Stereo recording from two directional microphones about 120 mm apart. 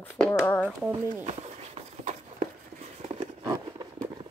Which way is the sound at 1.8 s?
75° right (ahead or behind).